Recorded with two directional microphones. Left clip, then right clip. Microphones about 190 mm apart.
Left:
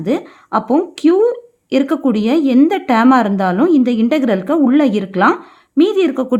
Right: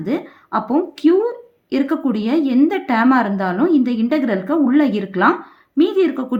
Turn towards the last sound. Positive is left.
turn(degrees=40)  # may be behind; listen again after turning